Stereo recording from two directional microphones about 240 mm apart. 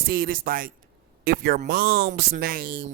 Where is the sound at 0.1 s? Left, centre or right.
Right.